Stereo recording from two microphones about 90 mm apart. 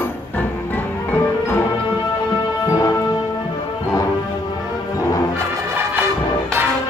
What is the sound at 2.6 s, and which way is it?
Music, 35° left (ahead or behind).